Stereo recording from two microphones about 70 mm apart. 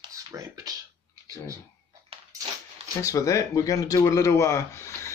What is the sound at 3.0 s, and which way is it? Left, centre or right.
Speech, left.